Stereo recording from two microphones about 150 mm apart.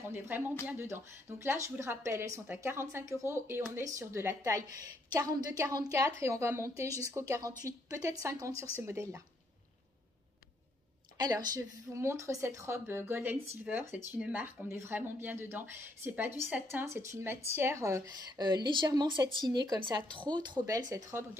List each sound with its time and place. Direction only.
0.0 s a woman's voice: 15° right (ahead or behind)
11.1 s a woman's voice: 25° right (ahead or behind)